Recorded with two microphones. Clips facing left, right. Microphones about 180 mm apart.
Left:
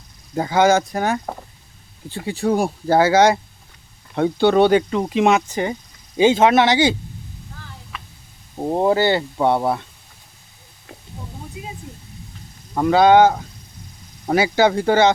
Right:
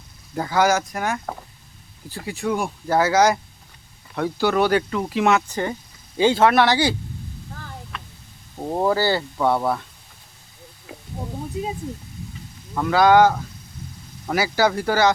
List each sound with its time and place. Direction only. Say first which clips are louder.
0.3 s speech: left 4 dB; 20° left (ahead or behind)
2.2 s speech: left 5 dB; 35° left (ahead or behind)
7.9 s hum: left 3 dB; 5° left (ahead or behind)
8.5 s speech: left 3 dB; 20° left (ahead or behind)
10.9 s a sound: right 2 dB; 5° right (ahead or behind)
12.7 s speech: left 3 dB; 25° left (ahead or behind)